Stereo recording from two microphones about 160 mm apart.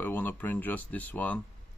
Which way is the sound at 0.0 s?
10° left (ahead or behind).